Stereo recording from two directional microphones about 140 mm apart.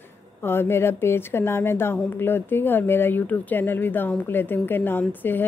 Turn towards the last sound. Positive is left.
turn(degrees=15)  # may be behind; listen again after turning